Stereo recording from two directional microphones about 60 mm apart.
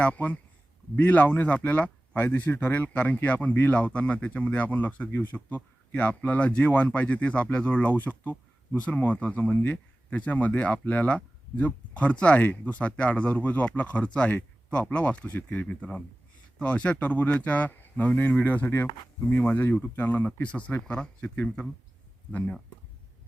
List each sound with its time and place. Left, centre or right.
0.0 s speech: left